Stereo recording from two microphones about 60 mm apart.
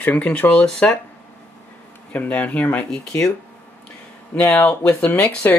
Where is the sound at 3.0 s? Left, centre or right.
Centre.